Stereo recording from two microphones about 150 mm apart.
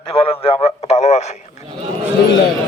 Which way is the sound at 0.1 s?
40° left (ahead or behind).